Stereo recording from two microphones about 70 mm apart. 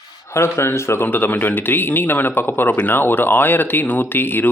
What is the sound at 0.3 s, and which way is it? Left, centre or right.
Speech, left.